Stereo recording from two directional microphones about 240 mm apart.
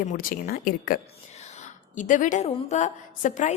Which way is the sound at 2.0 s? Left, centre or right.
Left.